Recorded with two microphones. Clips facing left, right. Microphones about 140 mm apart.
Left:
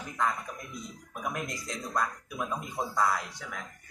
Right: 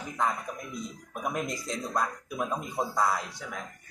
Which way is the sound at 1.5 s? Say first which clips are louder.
Right 3 dB; 10° right (ahead or behind).